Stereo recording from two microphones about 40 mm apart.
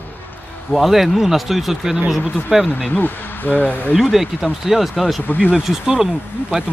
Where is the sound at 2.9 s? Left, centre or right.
Left.